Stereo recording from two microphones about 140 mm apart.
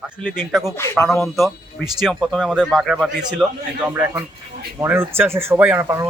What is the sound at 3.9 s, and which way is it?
Speech, 15° right (ahead or behind).